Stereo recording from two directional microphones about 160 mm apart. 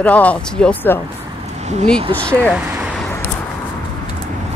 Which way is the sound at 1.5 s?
45° right (ahead or behind).